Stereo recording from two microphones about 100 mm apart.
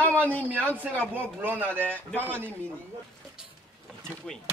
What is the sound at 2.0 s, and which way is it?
Speech, 15° left (ahead or behind).